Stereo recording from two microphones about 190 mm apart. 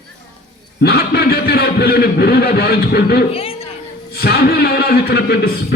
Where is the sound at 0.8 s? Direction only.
55° left (ahead or behind).